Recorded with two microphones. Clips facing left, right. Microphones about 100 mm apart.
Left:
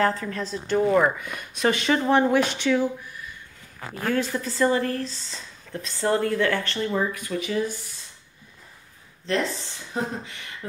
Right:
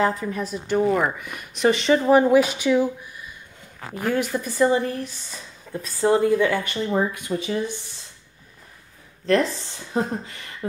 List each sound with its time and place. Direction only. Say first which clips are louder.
0.0 s speech: right 1 dB; 15° right (ahead or behind)
4.1 s speech: right 1 dB; 15° right (ahead or behind)
6.9 s speech: right 5 dB; 25° right (ahead or behind)
9.9 s speech: right 4 dB; 35° right (ahead or behind)